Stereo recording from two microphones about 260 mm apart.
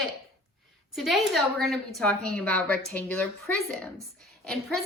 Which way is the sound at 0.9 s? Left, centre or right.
Centre.